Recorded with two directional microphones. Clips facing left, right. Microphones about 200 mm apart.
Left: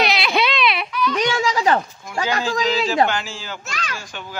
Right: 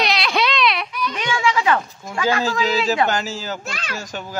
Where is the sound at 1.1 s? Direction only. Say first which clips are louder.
Even; 40° left (ahead or behind).